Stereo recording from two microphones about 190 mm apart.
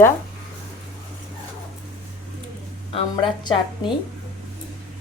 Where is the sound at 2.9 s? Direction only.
25° left (ahead or behind).